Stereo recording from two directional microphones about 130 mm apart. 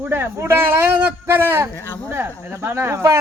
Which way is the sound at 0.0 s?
15° right (ahead or behind).